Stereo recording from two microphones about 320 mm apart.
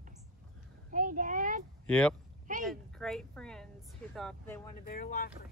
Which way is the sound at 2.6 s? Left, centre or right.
Centre.